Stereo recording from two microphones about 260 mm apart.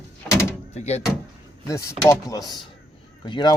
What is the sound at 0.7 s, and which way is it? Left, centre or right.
Speech, left.